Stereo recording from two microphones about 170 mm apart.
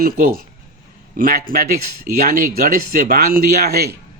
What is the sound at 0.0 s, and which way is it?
A man's voice, 60° right (ahead or behind).